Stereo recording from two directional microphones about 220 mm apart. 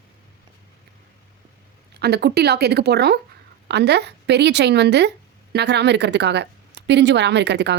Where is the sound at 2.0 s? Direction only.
50° right (ahead or behind).